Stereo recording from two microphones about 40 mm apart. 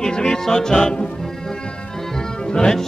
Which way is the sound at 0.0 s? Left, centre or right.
Centre.